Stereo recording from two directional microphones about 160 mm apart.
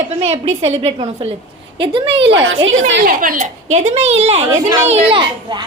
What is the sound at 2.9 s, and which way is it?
A woman's voice, 60° right (ahead or behind).